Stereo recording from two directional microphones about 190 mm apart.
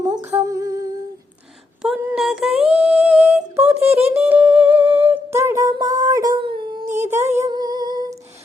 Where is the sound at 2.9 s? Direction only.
5° right (ahead or behind).